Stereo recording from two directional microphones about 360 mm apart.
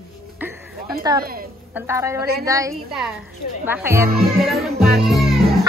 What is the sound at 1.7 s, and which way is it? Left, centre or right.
Speech, centre.